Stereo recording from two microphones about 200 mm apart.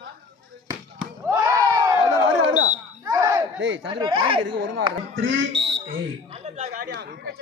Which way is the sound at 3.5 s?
70° right (ahead or behind).